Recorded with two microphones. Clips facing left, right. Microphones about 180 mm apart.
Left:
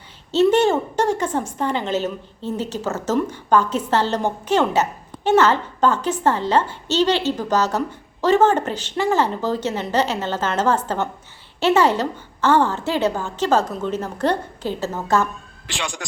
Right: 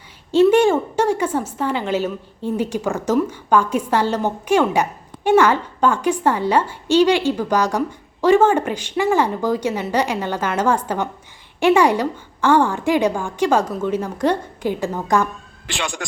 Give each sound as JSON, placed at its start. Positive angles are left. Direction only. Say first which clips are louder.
{"t": 0.3, "sound": "a woman's voice", "louder": "right 3 dB", "side_deg": -10}
{"t": 15.6, "sound": "speech", "louder": "right 3 dB", "side_deg": -55}